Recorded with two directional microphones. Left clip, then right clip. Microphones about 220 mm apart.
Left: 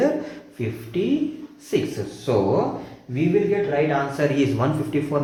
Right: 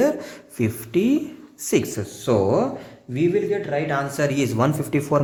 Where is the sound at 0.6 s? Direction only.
50° right (ahead or behind).